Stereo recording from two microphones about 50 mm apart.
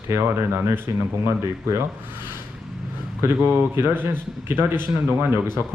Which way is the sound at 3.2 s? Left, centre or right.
Right.